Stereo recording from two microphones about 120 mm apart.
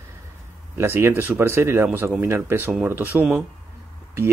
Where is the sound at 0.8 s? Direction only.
20° right (ahead or behind).